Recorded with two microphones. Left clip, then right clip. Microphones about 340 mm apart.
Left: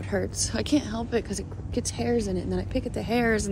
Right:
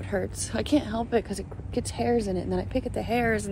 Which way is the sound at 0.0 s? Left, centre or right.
Centre.